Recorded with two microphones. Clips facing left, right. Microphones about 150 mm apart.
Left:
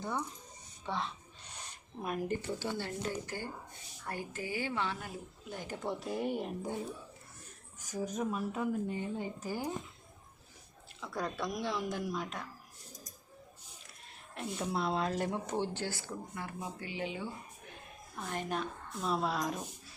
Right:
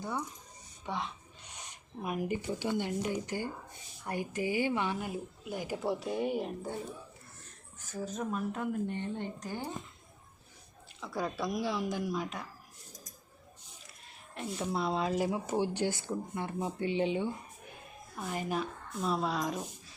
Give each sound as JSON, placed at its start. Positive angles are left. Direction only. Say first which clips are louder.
{"t": 0.9, "sound": "speech", "louder": "even", "side_deg": -15}
{"t": 7.8, "sound": "a woman's voice", "louder": "left 1 dB", "side_deg": 15}
{"t": 11.0, "sound": "a woman's voice", "louder": "right 2 dB", "side_deg": 0}
{"t": 14.3, "sound": "speech", "louder": "right 1 dB", "side_deg": 0}
{"t": 18.2, "sound": "a woman's voice", "louder": "right 2 dB", "side_deg": -5}